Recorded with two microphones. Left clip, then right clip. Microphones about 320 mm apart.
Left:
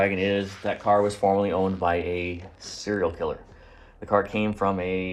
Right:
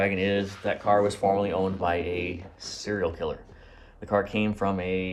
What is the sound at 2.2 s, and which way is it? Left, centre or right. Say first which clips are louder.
Speech: left 1 dB; right.